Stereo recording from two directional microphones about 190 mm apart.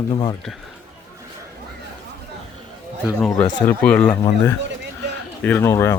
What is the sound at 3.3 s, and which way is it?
Speech, 20° left (ahead or behind).